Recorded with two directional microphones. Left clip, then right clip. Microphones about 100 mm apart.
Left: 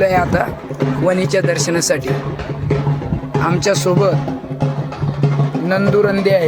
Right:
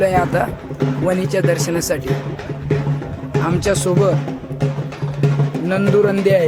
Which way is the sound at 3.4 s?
35° right (ahead or behind).